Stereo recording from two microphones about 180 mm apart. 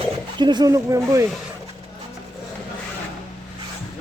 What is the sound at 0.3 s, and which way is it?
Speech, 25° right (ahead or behind).